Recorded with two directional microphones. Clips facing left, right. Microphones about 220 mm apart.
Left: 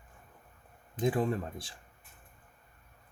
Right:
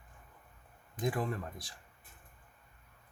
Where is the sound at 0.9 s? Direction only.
25° left (ahead or behind).